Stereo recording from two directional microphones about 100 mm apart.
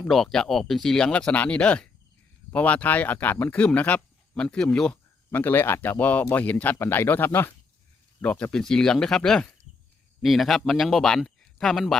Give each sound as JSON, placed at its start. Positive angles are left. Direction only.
{"t": 0.1, "sound": "speech", "side_deg": 5}